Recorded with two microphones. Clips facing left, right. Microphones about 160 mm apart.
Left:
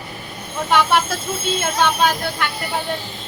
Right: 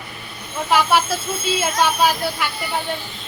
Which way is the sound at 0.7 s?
Centre (ahead or behind).